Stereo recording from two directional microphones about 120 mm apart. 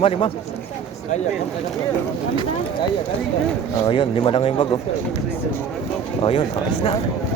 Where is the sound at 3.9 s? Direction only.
50° left (ahead or behind).